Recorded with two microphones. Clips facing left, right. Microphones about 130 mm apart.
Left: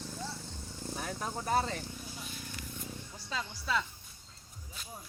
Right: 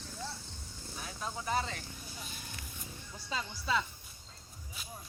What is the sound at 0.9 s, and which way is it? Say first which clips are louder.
Speech: left 3 dB; 50° left (ahead or behind).